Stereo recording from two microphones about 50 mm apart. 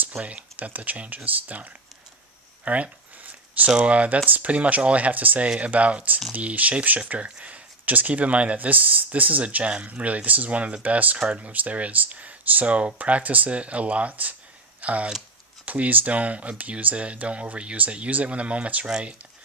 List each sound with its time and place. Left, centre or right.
0.2 s speech: right
2.6 s a sound: right
3.8 s speech: right